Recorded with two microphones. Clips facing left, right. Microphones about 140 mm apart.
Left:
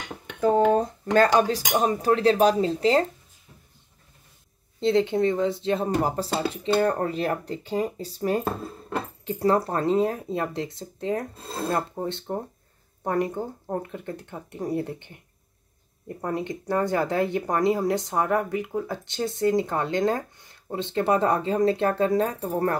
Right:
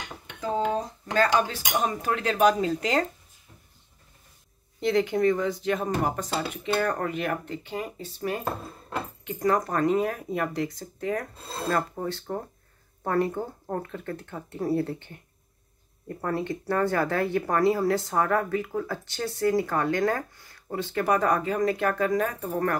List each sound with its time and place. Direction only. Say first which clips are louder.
0.4 s speech: left 7 dB; 55° left (ahead or behind)
1.3 s speech: left 4 dB; 35° left (ahead or behind)
4.7 s speech: left 2 dB; 25° left (ahead or behind)
16.2 s speech: even; 20° left (ahead or behind)